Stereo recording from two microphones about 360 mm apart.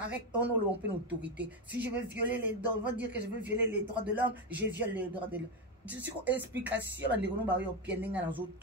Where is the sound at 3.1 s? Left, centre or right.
Right.